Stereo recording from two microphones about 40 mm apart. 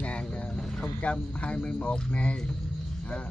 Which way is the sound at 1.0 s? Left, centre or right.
Left.